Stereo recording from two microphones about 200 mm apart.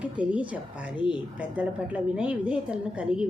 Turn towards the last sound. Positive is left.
turn(degrees=-5)  # may be behind; listen again after turning